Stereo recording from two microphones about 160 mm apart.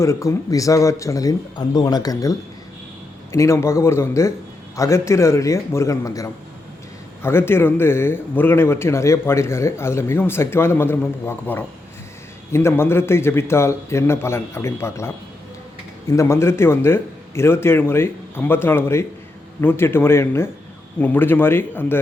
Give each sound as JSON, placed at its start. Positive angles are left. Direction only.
{"t": 0.0, "sound": "speech", "side_deg": 20}
{"t": 3.3, "sound": "a man's voice", "side_deg": 20}